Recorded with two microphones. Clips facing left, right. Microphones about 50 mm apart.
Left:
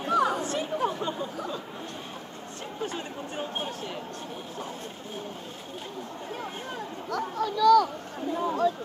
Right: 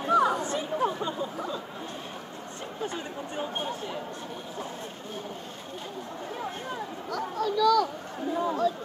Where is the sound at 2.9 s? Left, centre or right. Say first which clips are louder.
Even; centre.